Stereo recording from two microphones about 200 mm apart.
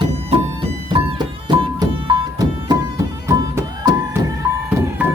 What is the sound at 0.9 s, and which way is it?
Music, 25° right (ahead or behind).